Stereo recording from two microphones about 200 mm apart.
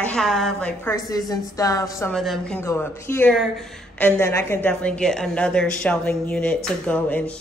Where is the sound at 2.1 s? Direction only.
Centre (ahead or behind).